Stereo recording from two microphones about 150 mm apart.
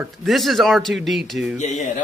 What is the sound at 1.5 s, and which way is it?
Speech, 50° left (ahead or behind).